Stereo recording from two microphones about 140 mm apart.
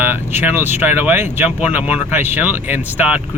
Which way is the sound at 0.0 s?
15° right (ahead or behind).